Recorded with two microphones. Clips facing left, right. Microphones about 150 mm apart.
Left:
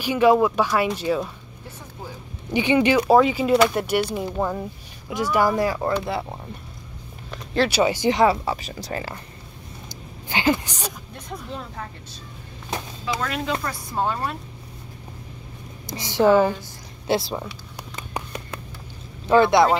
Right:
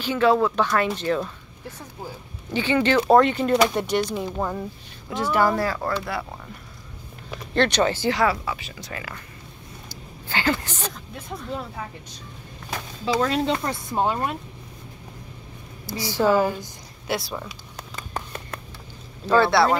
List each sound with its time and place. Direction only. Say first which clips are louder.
0.0 s speech: left 2 dB; 15° left (ahead or behind)
2.5 s speech: left 2 dB; 15° left (ahead or behind)
3.1 s speech: right 1 dB; 5° left (ahead or behind); by 6.2 s 20° left (ahead or behind)
7.2 s speech: even; 5° left (ahead or behind); by 8.5 s 25° left (ahead or behind)
8.5 s speech: left 6 dB; 40° left (ahead or behind)
9.8 s a sound: left 1 dB; 15° left (ahead or behind)
11.2 s speech: right 2 dB; 5° right (ahead or behind)
13.0 s speech: right 6 dB; 30° right (ahead or behind)
15.9 s a woman's voice: left 3 dB; 20° left (ahead or behind)
17.9 s a sound: left 1 dB; 15° left (ahead or behind)
19.2 s speech: left 2 dB; 15° left (ahead or behind)